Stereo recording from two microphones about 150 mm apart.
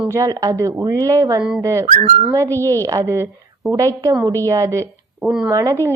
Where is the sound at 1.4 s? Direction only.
5° right (ahead or behind).